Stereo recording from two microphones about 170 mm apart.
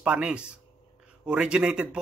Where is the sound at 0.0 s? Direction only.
5° right (ahead or behind).